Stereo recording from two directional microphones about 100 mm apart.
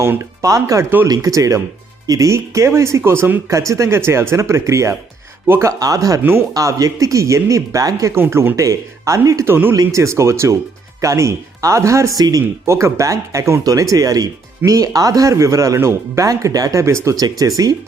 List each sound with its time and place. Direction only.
0.0 s speech: 30° right (ahead or behind)
3.5 s speech: 30° right (ahead or behind)
8.1 s speech: 25° right (ahead or behind)
9.5 s speech: 20° right (ahead or behind); by 17.5 s 40° right (ahead or behind)